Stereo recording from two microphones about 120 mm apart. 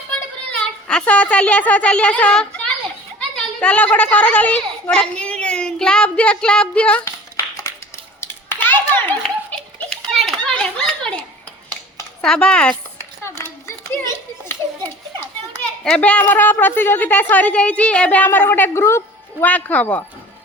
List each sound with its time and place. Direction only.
0.6 s a child's voice: 10° left (ahead or behind)
8.2 s a sound: 15° left (ahead or behind)
10.2 s children playing: 5° left (ahead or behind)
12.2 s a woman's voice: 5° left (ahead or behind)
13.4 s children playing: 20° left (ahead or behind)
15.8 s a woman's voice: 10° left (ahead or behind)